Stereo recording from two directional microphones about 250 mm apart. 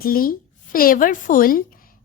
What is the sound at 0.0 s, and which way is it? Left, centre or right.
A woman's voice, left.